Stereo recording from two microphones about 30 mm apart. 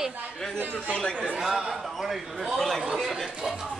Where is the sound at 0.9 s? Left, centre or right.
Left.